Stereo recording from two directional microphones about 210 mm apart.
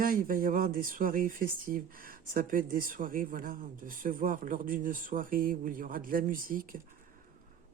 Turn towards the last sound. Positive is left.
turn(degrees=-40)  # may be behind; listen again after turning